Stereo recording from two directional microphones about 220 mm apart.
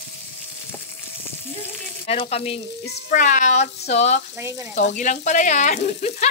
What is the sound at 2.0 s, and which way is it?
Speech, 25° left (ahead or behind).